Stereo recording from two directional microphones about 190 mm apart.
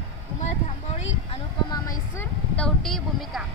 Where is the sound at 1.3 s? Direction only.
20° left (ahead or behind).